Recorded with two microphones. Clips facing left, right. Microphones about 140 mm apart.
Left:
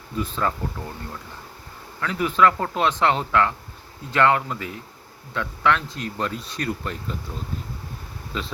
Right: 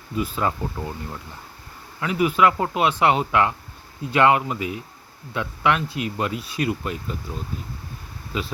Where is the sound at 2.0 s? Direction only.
15° right (ahead or behind).